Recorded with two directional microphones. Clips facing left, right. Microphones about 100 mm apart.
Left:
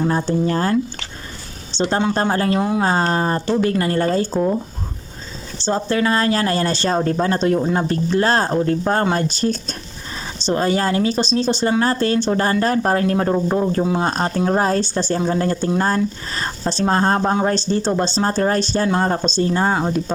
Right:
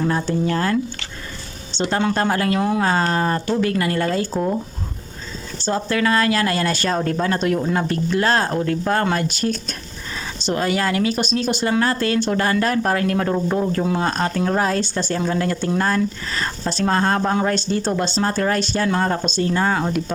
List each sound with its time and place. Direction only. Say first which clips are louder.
0.0 s a woman's voice: left 2 dB; 25° left (ahead or behind)
2.1 s speech: left 1 dB; 30° left (ahead or behind)
2.6 s speech: left 1 dB; 15° left (ahead or behind)
2.8 s speech: left 1 dB; 30° left (ahead or behind)
5.5 s a woman's voice: left 2 dB; 30° left (ahead or behind)